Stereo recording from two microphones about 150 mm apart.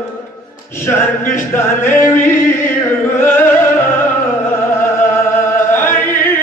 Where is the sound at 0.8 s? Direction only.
15° left (ahead or behind).